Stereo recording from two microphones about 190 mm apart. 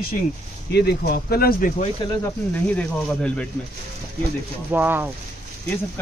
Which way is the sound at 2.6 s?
5° left (ahead or behind).